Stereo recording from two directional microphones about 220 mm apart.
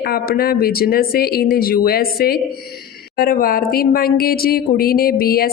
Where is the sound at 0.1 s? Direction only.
45° left (ahead or behind).